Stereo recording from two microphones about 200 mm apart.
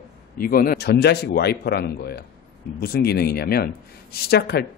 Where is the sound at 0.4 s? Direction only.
45° left (ahead or behind).